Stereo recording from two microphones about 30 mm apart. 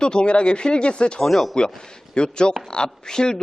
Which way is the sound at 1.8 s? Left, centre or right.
Left.